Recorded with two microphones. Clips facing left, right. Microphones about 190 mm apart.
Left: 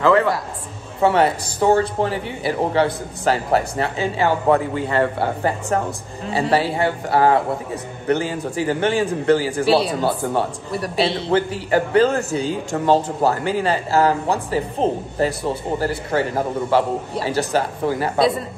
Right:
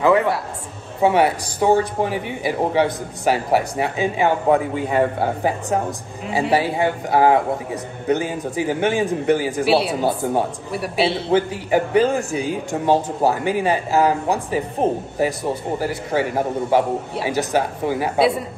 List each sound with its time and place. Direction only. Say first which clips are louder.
0.0 s a man's voice: even; 15° right (ahead or behind)